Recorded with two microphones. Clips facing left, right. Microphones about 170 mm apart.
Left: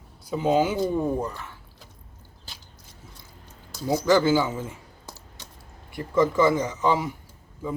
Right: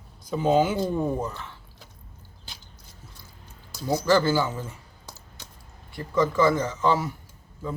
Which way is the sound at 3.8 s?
15° left (ahead or behind).